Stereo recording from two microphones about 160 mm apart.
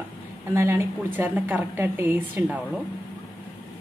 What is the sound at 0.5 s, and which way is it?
A woman's voice, 15° right (ahead or behind).